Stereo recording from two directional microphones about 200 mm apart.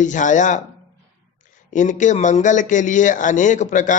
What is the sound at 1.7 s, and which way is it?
A man's voice, 40° left (ahead or behind).